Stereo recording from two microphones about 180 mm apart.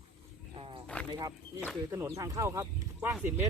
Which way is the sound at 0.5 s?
30° right (ahead or behind).